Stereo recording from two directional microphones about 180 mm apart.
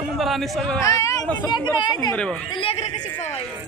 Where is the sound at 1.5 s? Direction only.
25° left (ahead or behind).